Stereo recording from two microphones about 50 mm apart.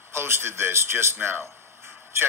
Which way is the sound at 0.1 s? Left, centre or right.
Right.